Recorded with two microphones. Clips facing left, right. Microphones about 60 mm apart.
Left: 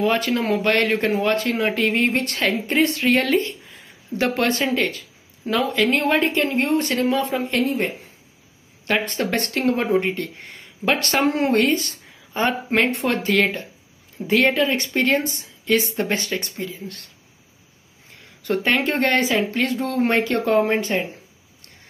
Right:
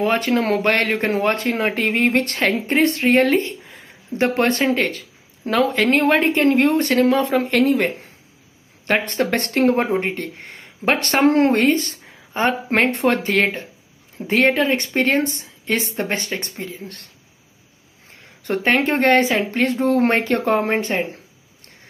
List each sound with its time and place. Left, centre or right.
0.0 s speech: right
0.4 s speech: right
0.7 s speech: right
3.6 s a sound: right
4.2 s speech: right
6.5 s speech: right
7.6 s a woman's voice: right
8.8 s speech: right
18.1 s speech: right